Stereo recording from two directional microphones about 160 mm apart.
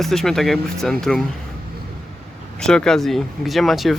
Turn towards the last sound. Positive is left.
turn(degrees=0)  # may be behind; listen again after turning